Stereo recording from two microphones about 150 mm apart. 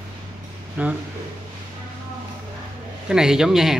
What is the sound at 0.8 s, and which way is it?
Speech, 10° right (ahead or behind).